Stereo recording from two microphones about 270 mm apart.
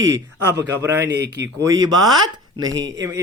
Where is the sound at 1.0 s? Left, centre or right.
Right.